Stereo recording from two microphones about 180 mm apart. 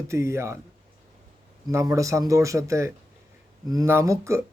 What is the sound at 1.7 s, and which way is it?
A man's voice, 15° right (ahead or behind).